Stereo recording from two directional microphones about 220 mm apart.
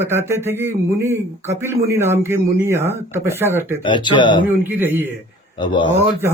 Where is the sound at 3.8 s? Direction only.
20° left (ahead or behind).